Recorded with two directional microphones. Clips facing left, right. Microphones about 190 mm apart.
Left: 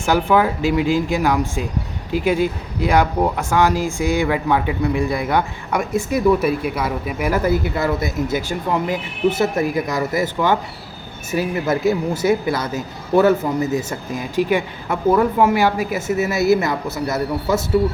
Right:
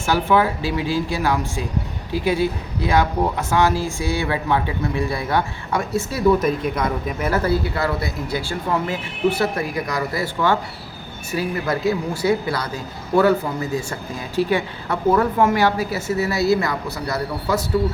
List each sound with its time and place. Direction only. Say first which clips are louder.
0.0 s a man's voice: left 2 dB; 15° left (ahead or behind)